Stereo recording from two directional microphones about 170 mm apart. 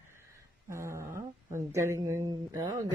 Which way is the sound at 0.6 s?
15° right (ahead or behind).